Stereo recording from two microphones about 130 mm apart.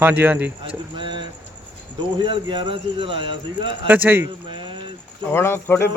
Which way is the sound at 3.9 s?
15° right (ahead or behind).